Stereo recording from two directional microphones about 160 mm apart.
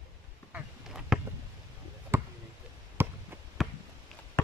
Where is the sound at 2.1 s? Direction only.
15° right (ahead or behind).